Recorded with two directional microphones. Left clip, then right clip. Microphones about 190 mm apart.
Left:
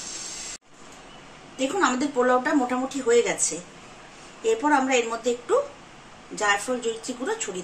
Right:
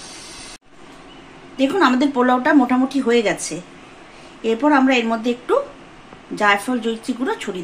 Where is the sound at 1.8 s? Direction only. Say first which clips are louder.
Right 6 dB; 55° right (ahead or behind).